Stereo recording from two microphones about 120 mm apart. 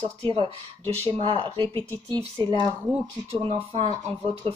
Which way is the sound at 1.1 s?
50° right (ahead or behind).